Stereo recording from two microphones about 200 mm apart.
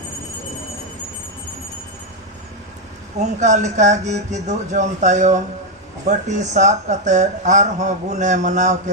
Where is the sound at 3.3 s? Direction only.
35° right (ahead or behind).